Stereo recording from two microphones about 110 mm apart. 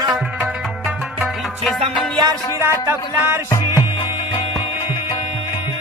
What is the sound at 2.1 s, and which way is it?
Music, 40° right (ahead or behind).